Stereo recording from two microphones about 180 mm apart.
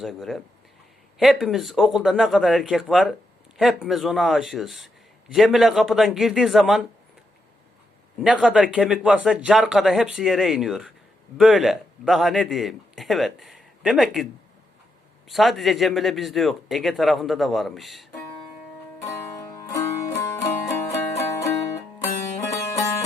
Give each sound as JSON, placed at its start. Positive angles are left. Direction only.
{"t": 0.0, "sound": "a man's voice", "side_deg": 0}
{"t": 8.2, "sound": "a man's voice", "side_deg": -5}
{"t": 15.3, "sound": "a man's voice", "side_deg": 0}
{"t": 19.0, "sound": "music", "side_deg": 15}